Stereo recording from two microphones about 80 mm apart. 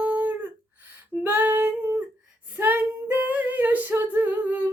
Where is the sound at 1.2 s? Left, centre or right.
Right.